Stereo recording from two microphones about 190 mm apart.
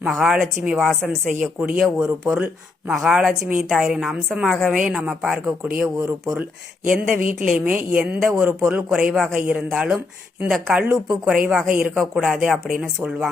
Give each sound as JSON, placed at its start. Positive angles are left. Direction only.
{"t": 0.0, "sound": "a woman's voice", "side_deg": -5}
{"t": 7.2, "sound": "a woman's voice", "side_deg": -50}
{"t": 7.4, "sound": "a woman's voice", "side_deg": -5}